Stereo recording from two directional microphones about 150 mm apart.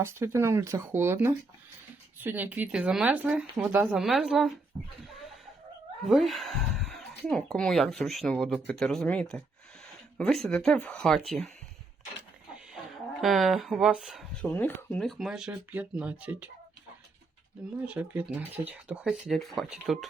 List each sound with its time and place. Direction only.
0.0 s speech: 15° right (ahead or behind)
4.7 s a sound: 30° right (ahead or behind)
6.1 s speech: centre (ahead or behind)
13.2 s speech: centre (ahead or behind)
14.5 s speech: 15° left (ahead or behind)
15.0 s speech: 5° right (ahead or behind)
17.8 s speech: 10° right (ahead or behind)